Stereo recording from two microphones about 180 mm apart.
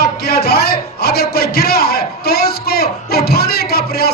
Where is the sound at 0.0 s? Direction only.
60° left (ahead or behind).